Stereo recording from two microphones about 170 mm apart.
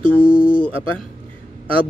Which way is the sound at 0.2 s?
30° left (ahead or behind).